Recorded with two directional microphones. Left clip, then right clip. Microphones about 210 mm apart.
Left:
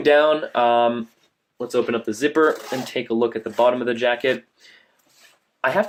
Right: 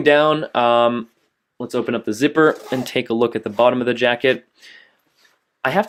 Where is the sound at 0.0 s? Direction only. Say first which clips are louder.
Right 1 dB; 40° right (ahead or behind).